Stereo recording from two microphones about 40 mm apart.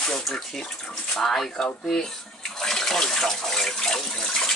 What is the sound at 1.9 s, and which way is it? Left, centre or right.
Bathtub, centre.